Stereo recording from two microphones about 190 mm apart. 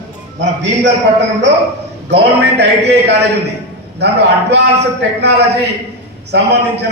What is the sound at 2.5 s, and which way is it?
A man's voice, 60° right (ahead or behind).